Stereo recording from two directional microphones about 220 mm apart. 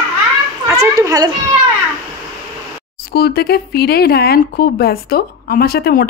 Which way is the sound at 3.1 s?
45° left (ahead or behind).